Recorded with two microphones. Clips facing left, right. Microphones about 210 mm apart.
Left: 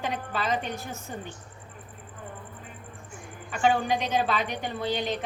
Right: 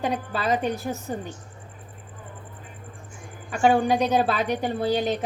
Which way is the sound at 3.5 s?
45° right (ahead or behind).